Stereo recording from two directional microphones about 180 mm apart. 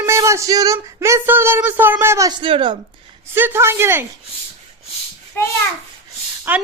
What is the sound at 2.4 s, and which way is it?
Speech, 25° right (ahead or behind).